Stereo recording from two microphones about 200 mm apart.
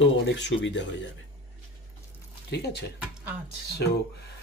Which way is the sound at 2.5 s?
60° left (ahead or behind).